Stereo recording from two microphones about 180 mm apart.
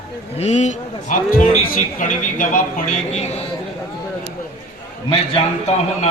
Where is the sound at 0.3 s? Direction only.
40° left (ahead or behind).